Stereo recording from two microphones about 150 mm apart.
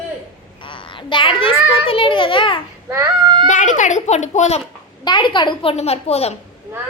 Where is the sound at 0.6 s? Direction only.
35° left (ahead or behind).